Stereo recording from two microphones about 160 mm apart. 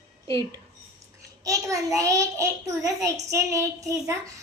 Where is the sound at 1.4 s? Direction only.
20° right (ahead or behind).